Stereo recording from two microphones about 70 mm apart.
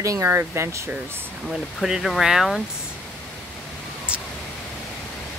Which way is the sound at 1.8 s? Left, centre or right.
Centre.